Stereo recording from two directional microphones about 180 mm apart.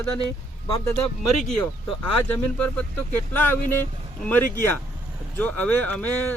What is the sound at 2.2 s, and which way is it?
Speech, 10° left (ahead or behind).